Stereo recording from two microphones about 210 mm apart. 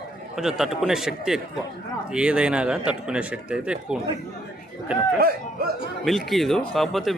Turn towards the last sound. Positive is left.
turn(degrees=0)  # may be behind; listen again after turning